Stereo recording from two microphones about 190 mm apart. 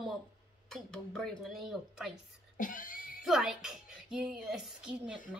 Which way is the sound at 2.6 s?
45° left (ahead or behind).